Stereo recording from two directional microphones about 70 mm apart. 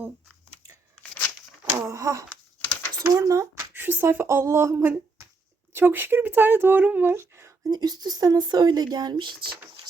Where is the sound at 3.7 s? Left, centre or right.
Right.